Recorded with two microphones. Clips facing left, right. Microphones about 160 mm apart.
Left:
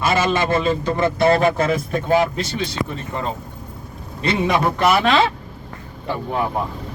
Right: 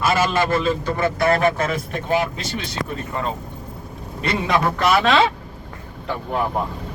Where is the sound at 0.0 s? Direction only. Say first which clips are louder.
Even; 20° left (ahead or behind).